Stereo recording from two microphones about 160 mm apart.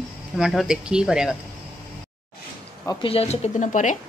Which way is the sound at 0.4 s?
Centre (ahead or behind).